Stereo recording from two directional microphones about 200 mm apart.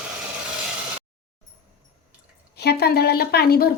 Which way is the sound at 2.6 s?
55° left (ahead or behind).